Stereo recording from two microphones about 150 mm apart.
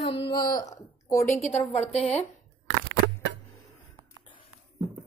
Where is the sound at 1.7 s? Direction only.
50° left (ahead or behind).